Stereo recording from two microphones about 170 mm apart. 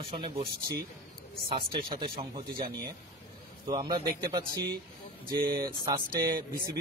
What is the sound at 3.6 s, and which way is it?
Speech, 25° right (ahead or behind).